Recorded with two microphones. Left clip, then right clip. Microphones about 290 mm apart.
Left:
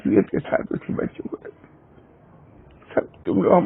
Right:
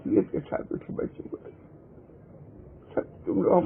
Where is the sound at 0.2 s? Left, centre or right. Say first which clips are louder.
Left 6 dB; left.